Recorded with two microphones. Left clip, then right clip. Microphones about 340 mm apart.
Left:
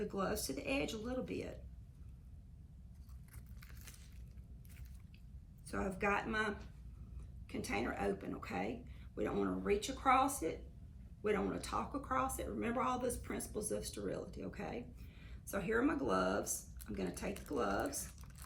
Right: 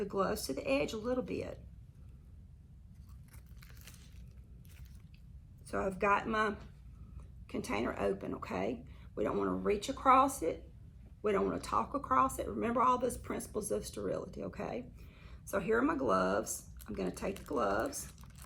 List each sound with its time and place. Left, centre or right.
0.0 s speech: centre
5.6 s speech: centre